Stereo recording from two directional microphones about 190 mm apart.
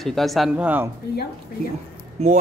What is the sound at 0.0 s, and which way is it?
Speech, centre (ahead or behind).